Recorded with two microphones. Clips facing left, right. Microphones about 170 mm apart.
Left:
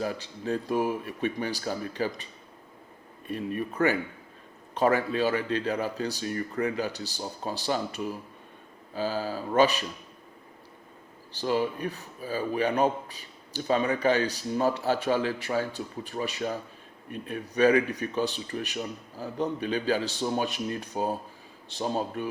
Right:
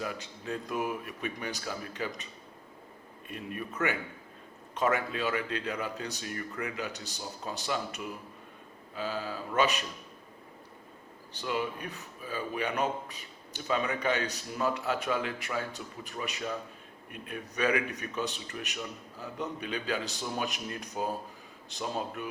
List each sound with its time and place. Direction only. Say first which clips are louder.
0.0 s a man's voice: left 6 dB; 35° left (ahead or behind)
3.2 s a man's voice: left 8 dB; 35° left (ahead or behind)
11.3 s a man's voice: left 6 dB; 35° left (ahead or behind)